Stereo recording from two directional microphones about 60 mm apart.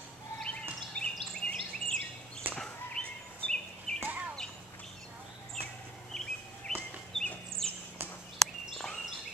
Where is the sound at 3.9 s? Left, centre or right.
Centre.